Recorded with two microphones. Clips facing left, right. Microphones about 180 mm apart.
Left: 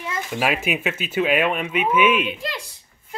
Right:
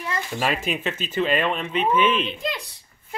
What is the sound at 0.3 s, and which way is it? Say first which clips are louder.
Speech: left 3 dB; 5° left (ahead or behind).